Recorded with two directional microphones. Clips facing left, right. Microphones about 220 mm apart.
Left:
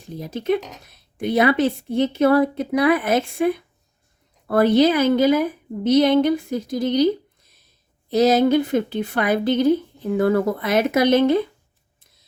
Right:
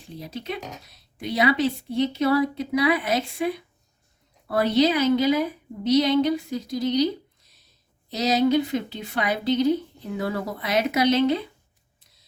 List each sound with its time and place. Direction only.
0.1 s speech: 50° left (ahead or behind)